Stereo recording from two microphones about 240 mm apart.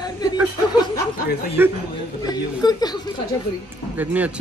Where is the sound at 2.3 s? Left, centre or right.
Centre.